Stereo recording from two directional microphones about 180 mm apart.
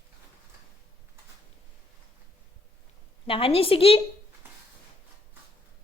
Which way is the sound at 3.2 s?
30° left (ahead or behind).